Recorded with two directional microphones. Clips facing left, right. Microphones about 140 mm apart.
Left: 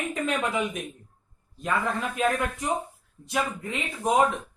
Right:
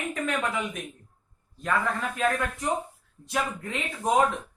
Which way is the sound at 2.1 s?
15° left (ahead or behind).